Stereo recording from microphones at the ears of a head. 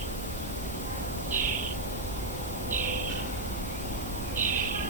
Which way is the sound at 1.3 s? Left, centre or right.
Right.